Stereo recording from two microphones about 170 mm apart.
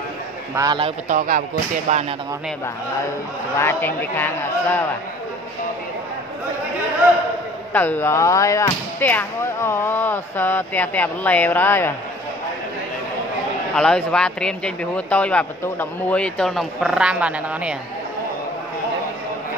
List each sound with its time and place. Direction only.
0.6 s a man's voice: 25° right (ahead or behind)
1.0 s speech: 50° right (ahead or behind)
1.9 s speech: 40° right (ahead or behind)
3.5 s speech: 15° left (ahead or behind)
7.7 s speech: 10° left (ahead or behind)
13.7 s speech: 5° left (ahead or behind)